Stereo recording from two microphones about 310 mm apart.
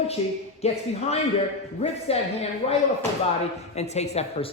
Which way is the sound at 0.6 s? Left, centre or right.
Centre.